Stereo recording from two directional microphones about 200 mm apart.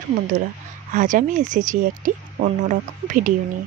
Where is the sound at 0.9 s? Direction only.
40° right (ahead or behind).